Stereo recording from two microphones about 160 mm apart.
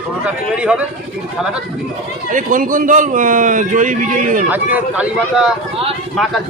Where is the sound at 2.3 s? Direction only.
55° right (ahead or behind).